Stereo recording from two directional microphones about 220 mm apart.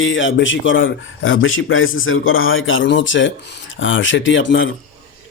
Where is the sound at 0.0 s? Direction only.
60° left (ahead or behind).